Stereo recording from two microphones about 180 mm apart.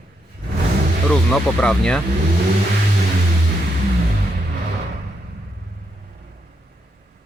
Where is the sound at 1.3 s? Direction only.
5° left (ahead or behind).